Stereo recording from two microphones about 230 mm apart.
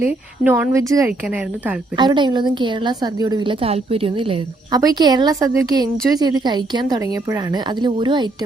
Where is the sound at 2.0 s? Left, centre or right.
Centre.